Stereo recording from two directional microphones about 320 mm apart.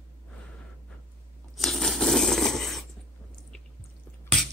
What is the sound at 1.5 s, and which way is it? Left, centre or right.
Tearing, centre.